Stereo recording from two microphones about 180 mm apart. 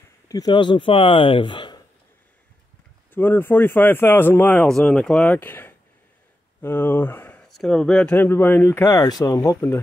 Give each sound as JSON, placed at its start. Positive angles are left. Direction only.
{"t": 0.3, "sound": "a man's voice", "side_deg": 25}
{"t": 3.1, "sound": "a man's voice", "side_deg": 10}